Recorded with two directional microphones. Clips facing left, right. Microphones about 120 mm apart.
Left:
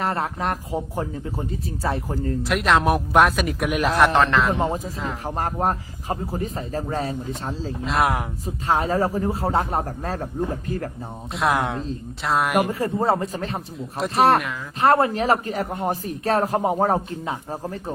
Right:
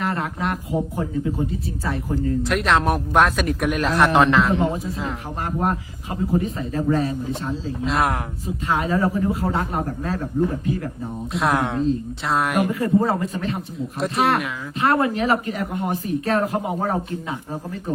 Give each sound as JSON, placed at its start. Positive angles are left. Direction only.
{"t": 0.0, "sound": "speech", "side_deg": 35}
{"t": 2.5, "sound": "speech", "side_deg": 0}
{"t": 5.4, "sound": "speech", "side_deg": 40}
{"t": 7.9, "sound": "speech", "side_deg": 0}
{"t": 8.4, "sound": "speech", "side_deg": 35}
{"t": 11.3, "sound": "speech", "side_deg": 0}
{"t": 12.8, "sound": "speech", "side_deg": 30}